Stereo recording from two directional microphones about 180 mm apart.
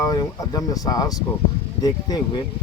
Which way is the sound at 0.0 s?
20° left (ahead or behind).